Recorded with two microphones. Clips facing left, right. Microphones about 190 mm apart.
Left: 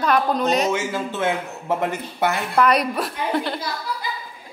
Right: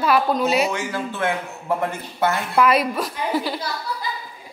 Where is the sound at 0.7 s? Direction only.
20° left (ahead or behind).